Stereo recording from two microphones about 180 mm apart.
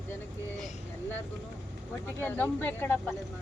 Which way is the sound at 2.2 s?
10° left (ahead or behind).